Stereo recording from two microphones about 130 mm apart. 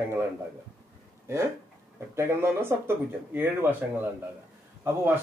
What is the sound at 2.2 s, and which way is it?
Speech, 20° right (ahead or behind).